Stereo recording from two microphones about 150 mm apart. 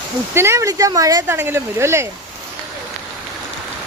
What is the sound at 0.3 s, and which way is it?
Speech, 20° right (ahead or behind).